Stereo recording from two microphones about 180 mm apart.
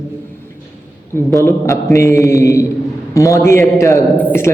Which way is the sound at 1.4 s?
15° left (ahead or behind).